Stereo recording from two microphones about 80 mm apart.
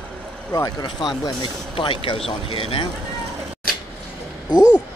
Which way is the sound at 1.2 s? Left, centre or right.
Left.